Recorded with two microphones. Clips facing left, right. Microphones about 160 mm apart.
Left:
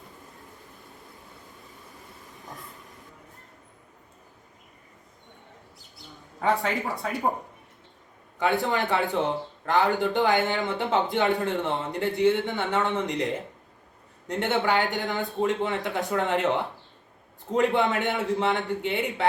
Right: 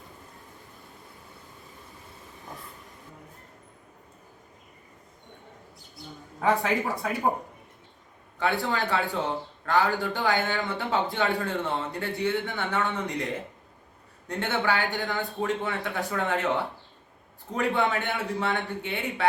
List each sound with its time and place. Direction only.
6.5 s speech: centre (ahead or behind)
8.4 s a man's voice: 20° left (ahead or behind)